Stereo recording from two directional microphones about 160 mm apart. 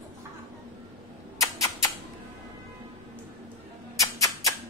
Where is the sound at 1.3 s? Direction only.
20° left (ahead or behind).